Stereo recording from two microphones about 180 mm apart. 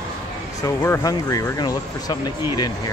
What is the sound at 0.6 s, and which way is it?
Speech, 15° left (ahead or behind).